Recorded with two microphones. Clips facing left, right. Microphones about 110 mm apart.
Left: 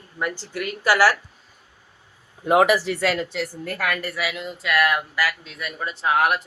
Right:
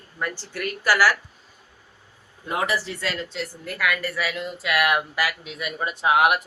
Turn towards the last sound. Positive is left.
turn(degrees=-15)  # may be behind; listen again after turning